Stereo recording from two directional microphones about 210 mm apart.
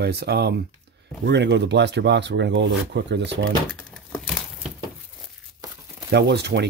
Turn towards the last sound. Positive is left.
turn(degrees=-55)  # may be behind; listen again after turning